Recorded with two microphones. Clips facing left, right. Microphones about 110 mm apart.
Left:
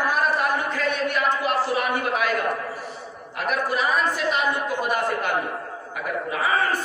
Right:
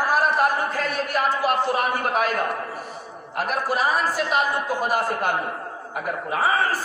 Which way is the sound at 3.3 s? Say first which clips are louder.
Right 1 dB; 40° right (ahead or behind).